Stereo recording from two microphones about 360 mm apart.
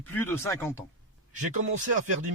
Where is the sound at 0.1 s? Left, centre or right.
Centre.